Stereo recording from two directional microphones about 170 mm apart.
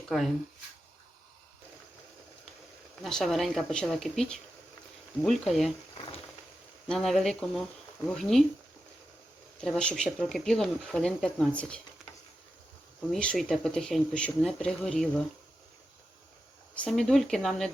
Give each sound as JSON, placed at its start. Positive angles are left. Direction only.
{"t": 0.1, "sound": "speech", "side_deg": 0}
{"t": 3.0, "sound": "speech", "side_deg": 5}
{"t": 6.8, "sound": "speech", "side_deg": 0}
{"t": 9.6, "sound": "speech", "side_deg": 5}
{"t": 13.1, "sound": "speech", "side_deg": 5}
{"t": 16.7, "sound": "speech", "side_deg": 5}